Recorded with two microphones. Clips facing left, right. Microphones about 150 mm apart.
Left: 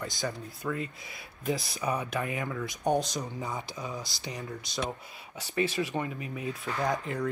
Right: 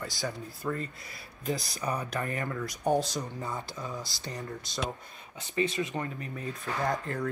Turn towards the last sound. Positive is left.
turn(degrees=0)  # may be behind; listen again after turning